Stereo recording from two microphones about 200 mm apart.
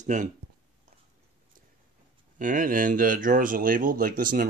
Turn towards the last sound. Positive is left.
turn(degrees=-45)  # may be behind; listen again after turning